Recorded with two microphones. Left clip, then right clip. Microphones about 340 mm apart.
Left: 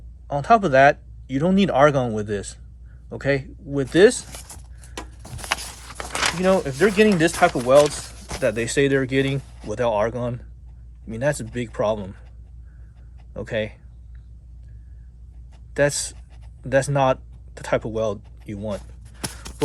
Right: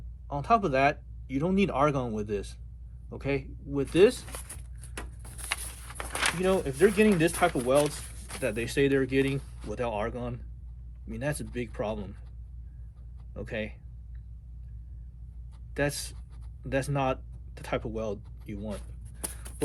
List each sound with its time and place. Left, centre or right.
0.3 s speech: left
5.8 s speech: left
13.3 s speech: left
15.7 s speech: left